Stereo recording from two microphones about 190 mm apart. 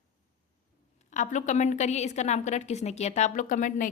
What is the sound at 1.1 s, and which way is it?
A woman's voice, 40° left (ahead or behind).